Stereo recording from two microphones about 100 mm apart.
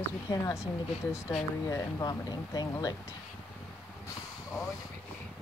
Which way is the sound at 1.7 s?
35° left (ahead or behind).